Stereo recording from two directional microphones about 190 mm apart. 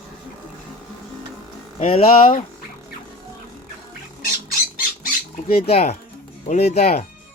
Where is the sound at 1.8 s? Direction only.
30° left (ahead or behind).